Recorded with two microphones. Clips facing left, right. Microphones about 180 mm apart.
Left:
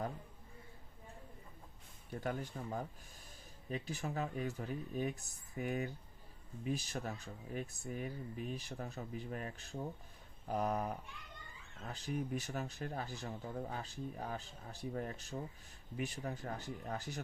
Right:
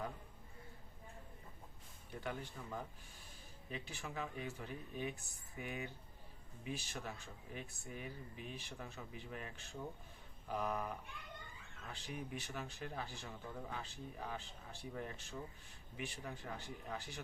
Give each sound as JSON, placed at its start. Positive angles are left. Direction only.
{"t": 2.2, "sound": "speech", "side_deg": 45}